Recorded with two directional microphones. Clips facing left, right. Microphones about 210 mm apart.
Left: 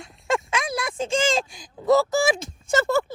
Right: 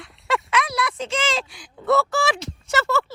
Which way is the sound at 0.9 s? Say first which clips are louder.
Left 3 dB; 50° left (ahead or behind).